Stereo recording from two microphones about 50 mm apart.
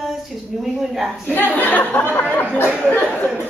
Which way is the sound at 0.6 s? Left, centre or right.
Centre.